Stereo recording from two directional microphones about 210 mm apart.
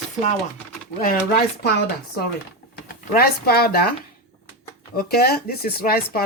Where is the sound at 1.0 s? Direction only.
45° left (ahead or behind).